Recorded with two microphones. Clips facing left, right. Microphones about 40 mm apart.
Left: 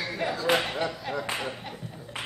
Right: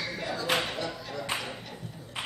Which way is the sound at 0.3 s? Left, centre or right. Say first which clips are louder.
Left 3 dB; centre.